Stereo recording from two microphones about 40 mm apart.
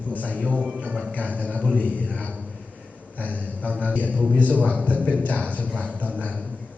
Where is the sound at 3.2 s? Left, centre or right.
Left.